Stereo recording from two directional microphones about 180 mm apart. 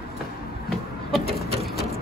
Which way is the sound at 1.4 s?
35° right (ahead or behind).